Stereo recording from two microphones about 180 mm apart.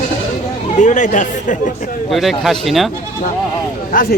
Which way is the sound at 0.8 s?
45° left (ahead or behind).